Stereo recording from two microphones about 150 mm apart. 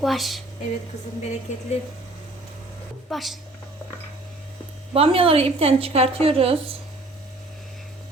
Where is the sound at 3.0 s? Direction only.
Centre (ahead or behind).